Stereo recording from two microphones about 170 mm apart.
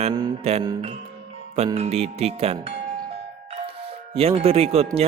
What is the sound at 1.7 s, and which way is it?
Speech, 35° right (ahead or behind).